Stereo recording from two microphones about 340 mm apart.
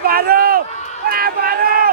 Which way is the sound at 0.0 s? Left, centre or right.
Right.